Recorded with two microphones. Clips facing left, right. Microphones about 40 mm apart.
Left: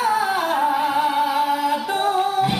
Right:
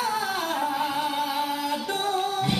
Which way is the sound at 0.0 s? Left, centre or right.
Centre.